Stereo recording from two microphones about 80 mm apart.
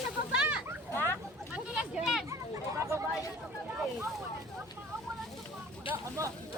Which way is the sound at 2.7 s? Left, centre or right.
Right.